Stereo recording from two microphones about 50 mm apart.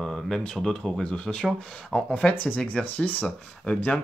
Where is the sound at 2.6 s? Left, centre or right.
Left.